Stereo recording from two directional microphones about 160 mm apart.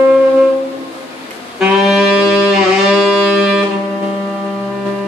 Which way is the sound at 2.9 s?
Centre (ahead or behind).